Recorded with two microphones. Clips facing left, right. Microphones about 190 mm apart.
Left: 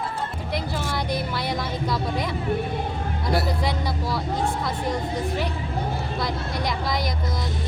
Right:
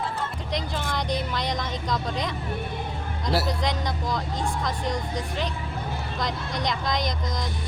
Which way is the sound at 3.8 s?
5° left (ahead or behind).